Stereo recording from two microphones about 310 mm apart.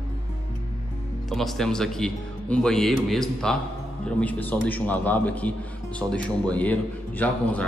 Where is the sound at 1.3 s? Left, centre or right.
Centre.